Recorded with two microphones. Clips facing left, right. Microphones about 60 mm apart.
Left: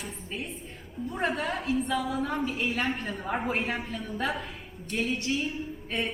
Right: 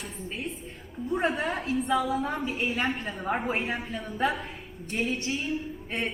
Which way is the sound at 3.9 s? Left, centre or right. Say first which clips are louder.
Right 3 dB; centre.